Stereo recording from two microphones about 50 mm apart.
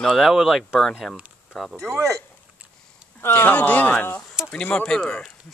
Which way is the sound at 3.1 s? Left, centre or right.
Left.